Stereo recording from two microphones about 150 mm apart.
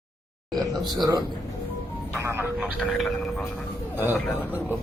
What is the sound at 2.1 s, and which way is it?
Speech, 15° right (ahead or behind).